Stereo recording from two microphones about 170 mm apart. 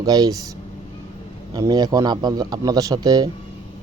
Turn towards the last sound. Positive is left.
turn(degrees=-25)  # may be behind; listen again after turning